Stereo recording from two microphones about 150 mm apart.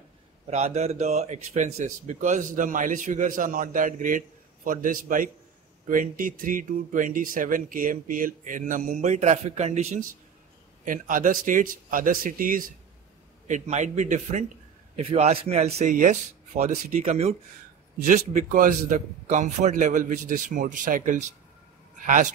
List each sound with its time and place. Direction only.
0.5 s speech: 45° right (ahead or behind)
10.9 s a man's voice: 60° right (ahead or behind)
13.5 s speech: 50° right (ahead or behind)
15.0 s speech: 45° right (ahead or behind)
18.0 s speech: 65° right (ahead or behind)